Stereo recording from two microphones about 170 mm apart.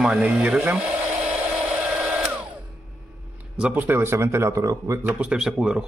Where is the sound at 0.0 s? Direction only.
5° right (ahead or behind).